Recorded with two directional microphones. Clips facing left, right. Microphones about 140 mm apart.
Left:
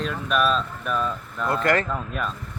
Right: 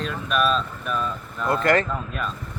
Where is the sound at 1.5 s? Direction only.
30° right (ahead or behind).